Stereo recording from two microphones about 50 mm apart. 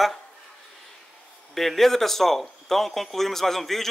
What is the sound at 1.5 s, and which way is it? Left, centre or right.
Speech, centre.